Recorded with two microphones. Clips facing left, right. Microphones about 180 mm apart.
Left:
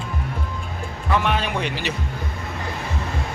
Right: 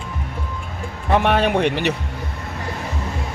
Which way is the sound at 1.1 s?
55° right (ahead or behind).